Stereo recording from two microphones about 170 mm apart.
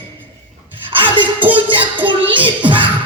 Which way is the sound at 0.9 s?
30° right (ahead or behind).